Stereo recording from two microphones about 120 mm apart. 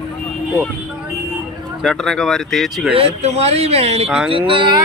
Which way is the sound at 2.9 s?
60° right (ahead or behind).